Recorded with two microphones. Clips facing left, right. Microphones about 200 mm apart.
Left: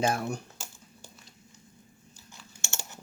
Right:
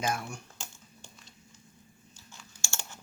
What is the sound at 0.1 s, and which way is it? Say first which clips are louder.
Speech: left 4 dB; 35° left (ahead or behind).